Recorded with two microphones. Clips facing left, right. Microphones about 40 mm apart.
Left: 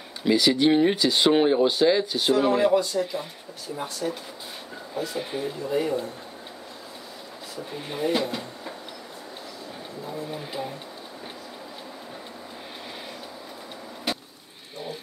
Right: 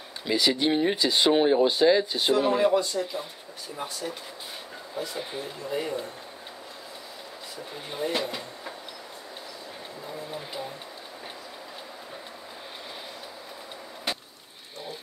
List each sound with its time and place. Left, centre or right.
0.4 s speech: centre
0.7 s speech: centre
1.0 s speech: centre
7.9 s speech: centre
10.3 s speech: centre